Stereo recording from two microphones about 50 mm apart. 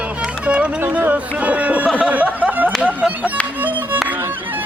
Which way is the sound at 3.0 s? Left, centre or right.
Right.